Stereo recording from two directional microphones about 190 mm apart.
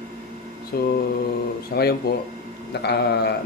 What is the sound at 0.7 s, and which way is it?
A man's voice, 55° left (ahead or behind).